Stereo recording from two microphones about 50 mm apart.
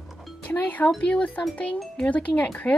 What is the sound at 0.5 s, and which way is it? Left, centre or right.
A woman's voice, left.